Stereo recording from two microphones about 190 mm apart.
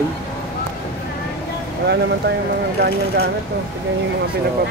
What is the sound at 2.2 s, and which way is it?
Speech, 60° right (ahead or behind).